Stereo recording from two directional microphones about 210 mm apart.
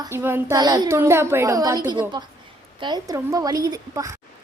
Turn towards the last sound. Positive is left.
turn(degrees=-15)  # may be behind; listen again after turning